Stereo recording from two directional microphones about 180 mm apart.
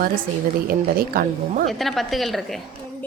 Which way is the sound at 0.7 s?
55° right (ahead or behind).